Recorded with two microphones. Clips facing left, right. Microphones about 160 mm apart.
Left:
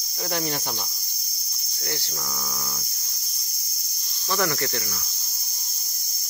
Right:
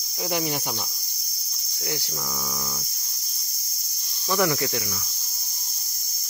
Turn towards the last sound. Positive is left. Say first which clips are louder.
# right 2 dB
turn(degrees=-10)  # may be behind; listen again after turning